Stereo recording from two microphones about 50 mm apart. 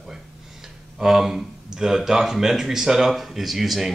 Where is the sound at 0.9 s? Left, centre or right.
Centre.